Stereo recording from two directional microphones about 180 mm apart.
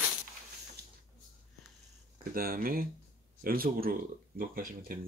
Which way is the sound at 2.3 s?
55° right (ahead or behind).